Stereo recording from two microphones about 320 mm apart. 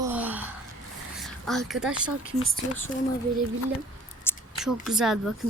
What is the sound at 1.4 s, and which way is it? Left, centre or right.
Speech, centre.